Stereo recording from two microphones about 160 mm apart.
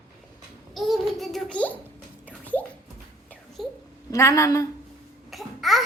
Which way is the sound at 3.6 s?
Centre (ahead or behind).